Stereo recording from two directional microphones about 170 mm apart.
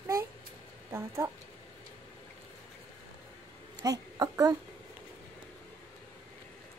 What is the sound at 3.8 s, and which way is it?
Speech, 20° right (ahead or behind).